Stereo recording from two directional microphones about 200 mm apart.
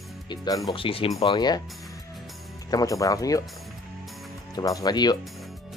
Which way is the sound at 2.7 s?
15° left (ahead or behind).